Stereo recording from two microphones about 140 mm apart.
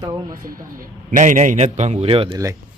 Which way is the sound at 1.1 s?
65° right (ahead or behind).